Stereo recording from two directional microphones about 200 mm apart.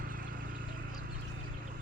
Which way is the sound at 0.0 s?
45° right (ahead or behind).